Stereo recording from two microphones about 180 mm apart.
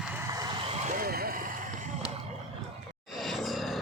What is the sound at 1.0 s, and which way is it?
Vehicle, 55° right (ahead or behind).